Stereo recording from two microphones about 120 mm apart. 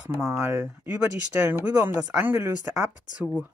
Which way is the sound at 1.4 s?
20° right (ahead or behind).